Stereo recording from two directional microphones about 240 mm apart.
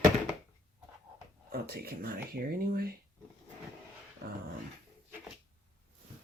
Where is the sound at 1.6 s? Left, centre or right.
Right.